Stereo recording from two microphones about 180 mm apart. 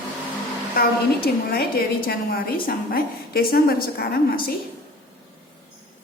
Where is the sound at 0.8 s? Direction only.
55° left (ahead or behind).